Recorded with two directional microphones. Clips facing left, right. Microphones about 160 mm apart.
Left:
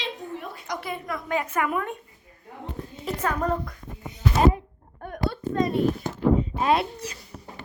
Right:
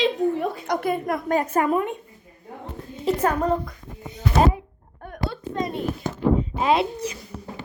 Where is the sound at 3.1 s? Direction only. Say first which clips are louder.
Right 8 dB; 30° right (ahead or behind).